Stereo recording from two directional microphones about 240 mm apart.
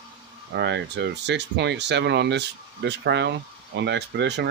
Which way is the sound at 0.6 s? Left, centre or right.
Right.